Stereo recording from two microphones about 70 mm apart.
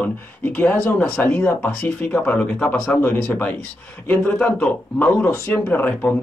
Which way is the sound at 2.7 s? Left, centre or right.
Centre.